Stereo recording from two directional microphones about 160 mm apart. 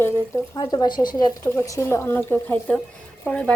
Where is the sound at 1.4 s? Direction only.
15° left (ahead or behind).